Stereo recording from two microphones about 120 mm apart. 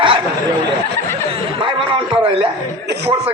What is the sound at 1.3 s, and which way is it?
Chuckle, 45° right (ahead or behind).